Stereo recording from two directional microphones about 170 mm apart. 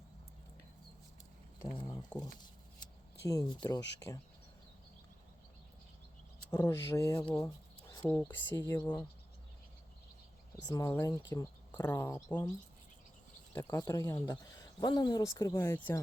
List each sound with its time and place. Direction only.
1.7 s a sound: 25° left (ahead or behind)
3.2 s speech: 20° left (ahead or behind)
6.5 s speech: 15° left (ahead or behind)
7.3 s writing: 20° left (ahead or behind)
8.0 s speech: 10° left (ahead or behind)
10.7 s speech: 20° left (ahead or behind)
13.5 s speech: 15° left (ahead or behind)